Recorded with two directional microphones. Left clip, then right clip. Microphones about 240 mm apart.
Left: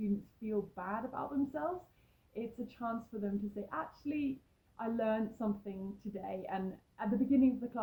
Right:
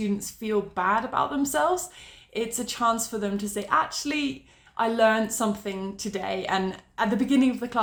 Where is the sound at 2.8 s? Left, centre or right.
Centre.